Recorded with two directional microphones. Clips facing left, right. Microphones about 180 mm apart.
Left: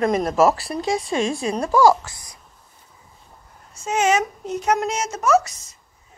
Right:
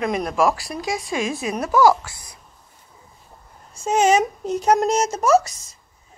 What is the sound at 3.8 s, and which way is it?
Speech, 35° right (ahead or behind).